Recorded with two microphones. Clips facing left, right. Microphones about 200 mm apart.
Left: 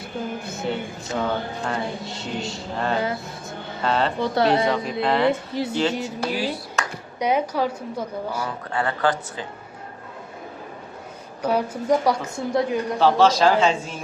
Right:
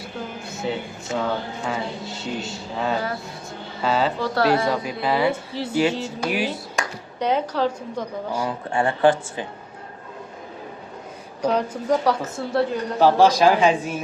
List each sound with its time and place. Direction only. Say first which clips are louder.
0.4 s speech: even; centre (ahead or behind)
4.2 s speech: left 1 dB; 20° left (ahead or behind)
4.7 s speech: left 1 dB; centre (ahead or behind)
5.5 s a woman's voice: right 1 dB; 15° left (ahead or behind)
6.3 s speech: right 1 dB; 15° right (ahead or behind)
7.2 s a woman's voice: even; 10° left (ahead or behind)
8.3 s speech: right 3 dB; 10° right (ahead or behind)
8.7 s speech: right 5 dB; 25° right (ahead or behind)
11.4 s a woman's voice: even; 10° left (ahead or behind)
13.0 s speech: right 2 dB; 10° right (ahead or behind)